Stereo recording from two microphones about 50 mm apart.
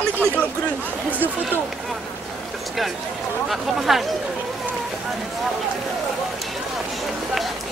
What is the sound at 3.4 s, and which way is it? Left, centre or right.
Speech, centre.